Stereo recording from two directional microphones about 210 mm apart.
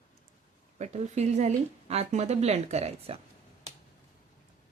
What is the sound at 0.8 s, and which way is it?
Speech, 30° right (ahead or behind).